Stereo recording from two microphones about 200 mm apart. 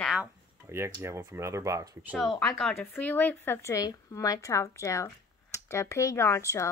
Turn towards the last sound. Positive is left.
turn(degrees=15)  # may be behind; listen again after turning